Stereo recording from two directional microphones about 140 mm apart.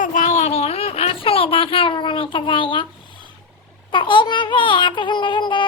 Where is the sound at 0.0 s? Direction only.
65° left (ahead or behind); by 2.8 s 35° left (ahead or behind).